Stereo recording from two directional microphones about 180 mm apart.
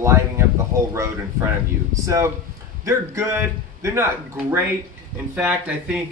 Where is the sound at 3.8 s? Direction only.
15° right (ahead or behind).